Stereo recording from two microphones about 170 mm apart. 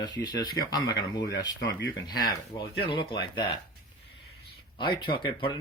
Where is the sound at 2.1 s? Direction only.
25° left (ahead or behind).